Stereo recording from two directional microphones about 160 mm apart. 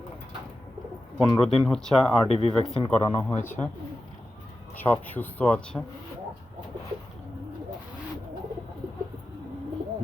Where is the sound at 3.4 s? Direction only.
10° left (ahead or behind).